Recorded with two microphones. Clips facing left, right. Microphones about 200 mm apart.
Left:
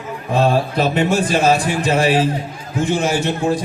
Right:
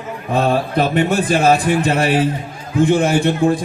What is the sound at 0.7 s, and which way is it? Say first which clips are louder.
A man's voice: right 1 dB; 55° right (ahead or behind).